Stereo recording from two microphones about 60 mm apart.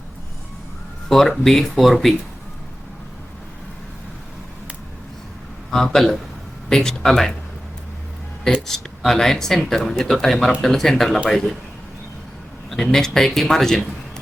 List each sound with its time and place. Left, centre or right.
1.0 s speech: centre
5.7 s speech: centre
8.6 s speech: centre
12.7 s speech: centre